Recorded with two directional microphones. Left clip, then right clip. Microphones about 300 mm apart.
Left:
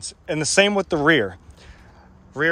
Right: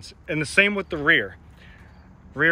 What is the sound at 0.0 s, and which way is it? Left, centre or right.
A man's voice, centre.